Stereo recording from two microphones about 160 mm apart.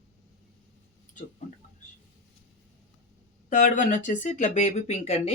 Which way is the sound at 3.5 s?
50° left (ahead or behind).